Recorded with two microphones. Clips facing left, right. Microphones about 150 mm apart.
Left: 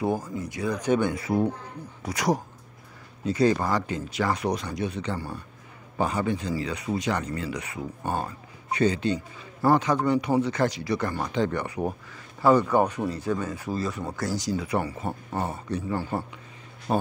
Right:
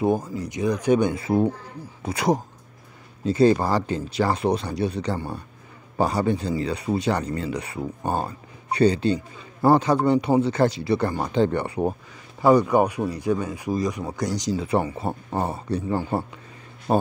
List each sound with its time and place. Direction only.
0.0 s speech: 20° right (ahead or behind)
12.4 s speech: 15° right (ahead or behind); by 16.0 s 30° right (ahead or behind)
16.9 s speech: 45° right (ahead or behind)